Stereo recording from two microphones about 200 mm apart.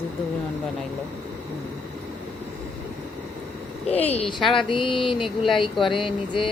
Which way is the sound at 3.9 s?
30° left (ahead or behind).